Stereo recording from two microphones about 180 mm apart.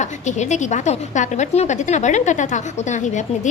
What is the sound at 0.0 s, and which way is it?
A woman's voice, 40° left (ahead or behind).